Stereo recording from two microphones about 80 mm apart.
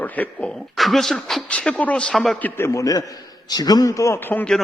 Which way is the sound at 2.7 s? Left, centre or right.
Left.